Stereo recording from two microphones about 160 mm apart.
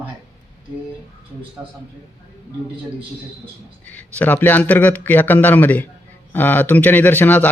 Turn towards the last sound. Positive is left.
turn(degrees=10)  # may be behind; listen again after turning